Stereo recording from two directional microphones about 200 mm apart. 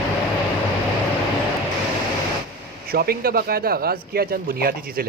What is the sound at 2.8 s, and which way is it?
Speech, 50° right (ahead or behind).